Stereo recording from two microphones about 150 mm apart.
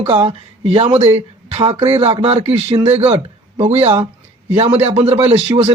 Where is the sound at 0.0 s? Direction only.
40° right (ahead or behind).